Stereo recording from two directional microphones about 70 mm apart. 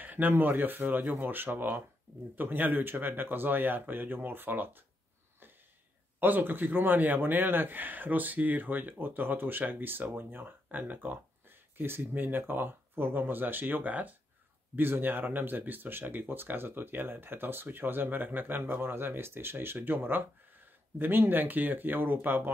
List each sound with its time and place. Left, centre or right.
0.0 s a man's voice: right
6.1 s a man's voice: right